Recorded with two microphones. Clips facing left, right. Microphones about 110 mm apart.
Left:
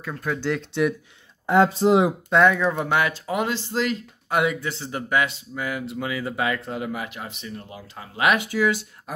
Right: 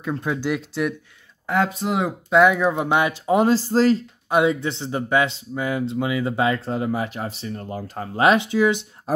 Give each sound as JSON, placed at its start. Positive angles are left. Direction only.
{"t": 0.0, "sound": "speech", "side_deg": -20}
{"t": 1.5, "sound": "speech", "side_deg": 30}
{"t": 2.2, "sound": "speech", "side_deg": -5}
{"t": 3.3, "sound": "speech", "side_deg": -35}
{"t": 4.3, "sound": "speech", "side_deg": -25}
{"t": 7.6, "sound": "speech", "side_deg": -45}
{"t": 8.2, "sound": "speech", "side_deg": -25}